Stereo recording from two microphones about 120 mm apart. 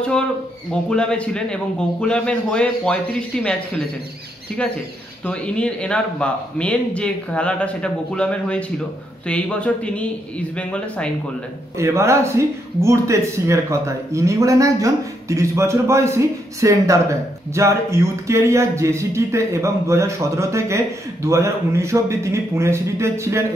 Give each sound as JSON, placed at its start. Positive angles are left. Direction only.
{"t": 0.8, "sound": "speech", "side_deg": 10}
{"t": 5.2, "sound": "speech", "side_deg": 10}
{"t": 11.8, "sound": "speech", "side_deg": -25}